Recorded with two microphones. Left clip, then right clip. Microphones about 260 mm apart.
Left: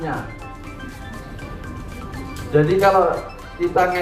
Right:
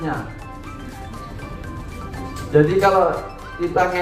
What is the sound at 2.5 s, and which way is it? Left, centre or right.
Speech, left.